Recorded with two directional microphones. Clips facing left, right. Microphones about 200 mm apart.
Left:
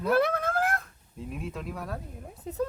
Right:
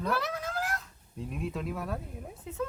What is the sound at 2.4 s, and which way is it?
Speech, 35° left (ahead or behind).